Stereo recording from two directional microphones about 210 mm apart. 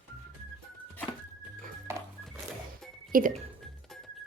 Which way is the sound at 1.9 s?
10° right (ahead or behind).